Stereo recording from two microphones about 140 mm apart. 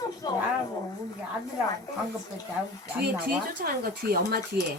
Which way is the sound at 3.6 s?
90° right.